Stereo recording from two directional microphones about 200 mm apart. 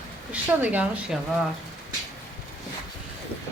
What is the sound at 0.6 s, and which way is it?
Speech, 5° right (ahead or behind).